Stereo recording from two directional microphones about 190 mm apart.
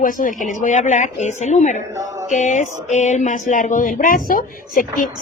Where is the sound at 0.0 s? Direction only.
45° left (ahead or behind).